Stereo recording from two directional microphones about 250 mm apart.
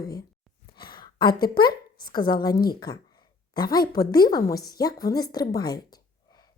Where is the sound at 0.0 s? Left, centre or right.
Centre.